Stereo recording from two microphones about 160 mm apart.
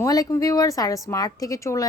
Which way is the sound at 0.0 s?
20° left (ahead or behind).